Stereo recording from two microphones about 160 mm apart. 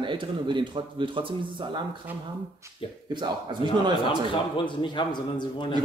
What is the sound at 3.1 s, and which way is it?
Speech, 30° right (ahead or behind).